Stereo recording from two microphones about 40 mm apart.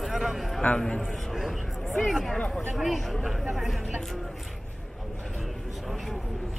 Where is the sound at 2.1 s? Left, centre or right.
Centre.